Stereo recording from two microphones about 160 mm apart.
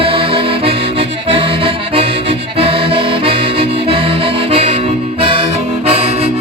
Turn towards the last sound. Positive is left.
turn(degrees=-35)  # may be behind; listen again after turning